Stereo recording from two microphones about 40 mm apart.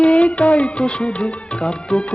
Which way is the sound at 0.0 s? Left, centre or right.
Left.